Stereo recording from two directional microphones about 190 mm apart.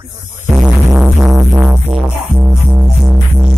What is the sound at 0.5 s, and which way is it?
Music, 5° right (ahead or behind).